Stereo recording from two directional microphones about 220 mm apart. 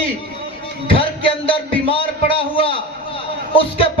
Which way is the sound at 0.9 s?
25° left (ahead or behind).